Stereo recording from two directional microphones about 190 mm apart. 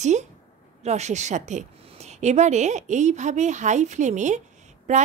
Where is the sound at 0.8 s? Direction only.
35° right (ahead or behind).